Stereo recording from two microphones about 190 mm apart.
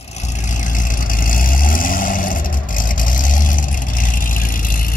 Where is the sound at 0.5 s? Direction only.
45° left (ahead or behind).